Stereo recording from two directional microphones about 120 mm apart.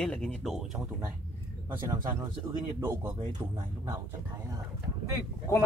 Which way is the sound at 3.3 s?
35° right (ahead or behind).